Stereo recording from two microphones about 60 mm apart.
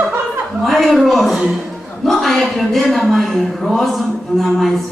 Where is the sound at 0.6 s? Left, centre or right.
Centre.